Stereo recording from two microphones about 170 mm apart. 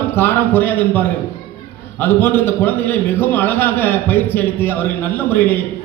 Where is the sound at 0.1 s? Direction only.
10° left (ahead or behind).